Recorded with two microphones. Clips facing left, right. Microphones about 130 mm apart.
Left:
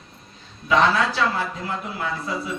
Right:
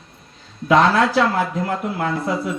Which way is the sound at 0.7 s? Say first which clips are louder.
Right 4 dB; 65° right (ahead or behind).